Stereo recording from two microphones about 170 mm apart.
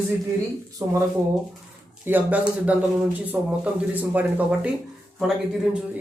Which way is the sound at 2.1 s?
10° right (ahead or behind).